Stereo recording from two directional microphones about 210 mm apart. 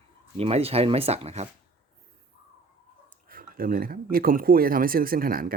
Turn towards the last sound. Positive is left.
turn(degrees=-45)  # may be behind; listen again after turning